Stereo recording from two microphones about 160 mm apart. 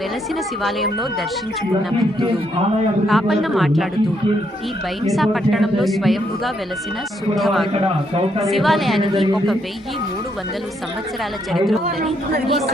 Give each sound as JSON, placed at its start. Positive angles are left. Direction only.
{"t": 3.1, "sound": "a woman's voice", "side_deg": 0}
{"t": 5.0, "sound": "a woman's voice", "side_deg": 0}
{"t": 7.7, "sound": "a man's voice", "side_deg": -40}
{"t": 8.4, "sound": "a woman's voice", "side_deg": 0}
{"t": 11.5, "sound": "a woman's voice", "side_deg": 0}